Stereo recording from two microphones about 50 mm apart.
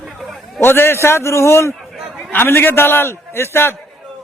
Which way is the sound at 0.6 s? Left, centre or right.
Left.